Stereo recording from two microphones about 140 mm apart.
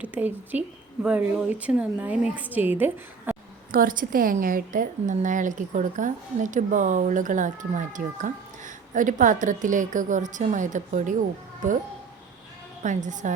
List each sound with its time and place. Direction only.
0.0 s a woman's voice: 10° right (ahead or behind)
3.7 s a woman's voice: 85° right; by 11.1 s 65° right (ahead or behind)
12.8 s a woman's voice: 60° right (ahead or behind)